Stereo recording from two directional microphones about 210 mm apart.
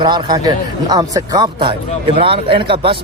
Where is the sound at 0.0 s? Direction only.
20° right (ahead or behind).